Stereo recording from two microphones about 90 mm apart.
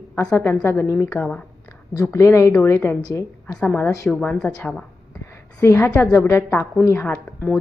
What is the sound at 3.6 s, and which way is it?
Speech, 15° left (ahead or behind).